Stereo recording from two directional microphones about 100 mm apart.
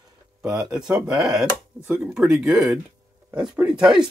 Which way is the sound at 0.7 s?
10° right (ahead or behind).